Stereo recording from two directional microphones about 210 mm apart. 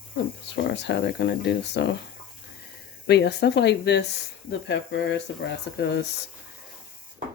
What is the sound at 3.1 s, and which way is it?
Speech, 55° left (ahead or behind).